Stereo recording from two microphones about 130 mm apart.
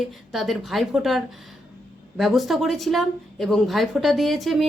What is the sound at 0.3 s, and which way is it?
Speech, centre (ahead or behind).